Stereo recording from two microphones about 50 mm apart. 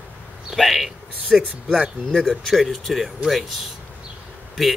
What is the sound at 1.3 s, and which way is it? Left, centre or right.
Speech, centre.